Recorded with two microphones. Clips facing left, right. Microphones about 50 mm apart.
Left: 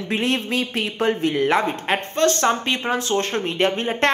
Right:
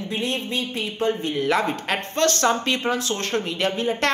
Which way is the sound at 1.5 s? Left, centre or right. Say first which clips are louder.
Left 2 dB; left.